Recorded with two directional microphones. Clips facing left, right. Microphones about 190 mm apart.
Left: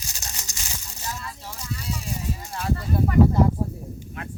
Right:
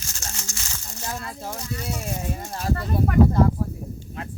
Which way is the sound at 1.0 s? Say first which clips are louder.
Right 4 dB; 50° right (ahead or behind).